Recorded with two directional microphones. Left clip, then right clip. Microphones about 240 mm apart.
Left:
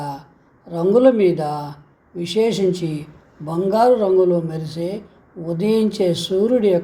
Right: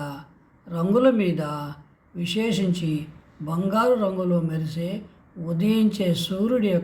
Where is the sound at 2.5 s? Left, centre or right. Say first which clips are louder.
Left 7 dB; centre.